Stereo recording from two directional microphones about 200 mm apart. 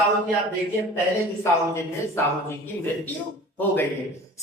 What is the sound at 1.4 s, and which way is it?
Speech, 15° left (ahead or behind).